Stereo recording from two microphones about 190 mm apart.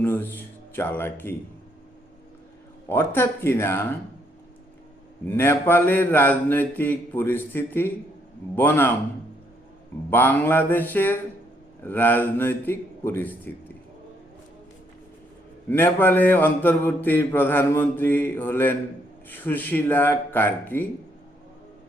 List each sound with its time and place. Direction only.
0.0 s speech: 10° left (ahead or behind)
2.9 s mantra: 10° left (ahead or behind)
5.2 s mantra: 10° left (ahead or behind)
10.1 s mantra: 10° left (ahead or behind)
15.7 s mantra: 10° left (ahead or behind)